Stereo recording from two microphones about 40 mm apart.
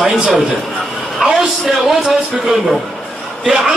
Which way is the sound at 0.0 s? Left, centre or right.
Centre.